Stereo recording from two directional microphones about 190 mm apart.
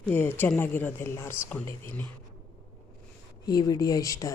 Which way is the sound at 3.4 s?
20° left (ahead or behind).